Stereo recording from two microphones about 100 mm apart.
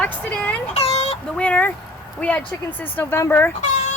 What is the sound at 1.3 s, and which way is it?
A woman's voice, 10° left (ahead or behind).